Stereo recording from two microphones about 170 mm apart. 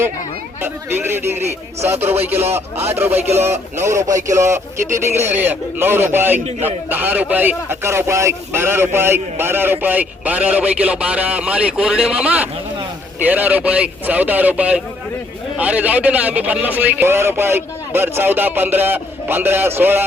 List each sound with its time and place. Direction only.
0.6 s speech: 15° right (ahead or behind)
6.4 s a man's voice: 40° right (ahead or behind)
6.9 s speech: 10° right (ahead or behind)